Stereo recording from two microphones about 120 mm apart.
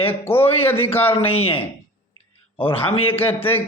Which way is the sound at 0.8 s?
55° left (ahead or behind).